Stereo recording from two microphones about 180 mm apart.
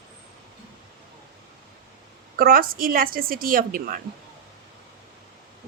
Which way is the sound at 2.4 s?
55° right (ahead or behind).